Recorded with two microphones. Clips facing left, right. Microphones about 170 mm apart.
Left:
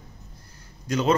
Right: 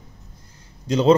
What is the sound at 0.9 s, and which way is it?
Speech, 25° right (ahead or behind).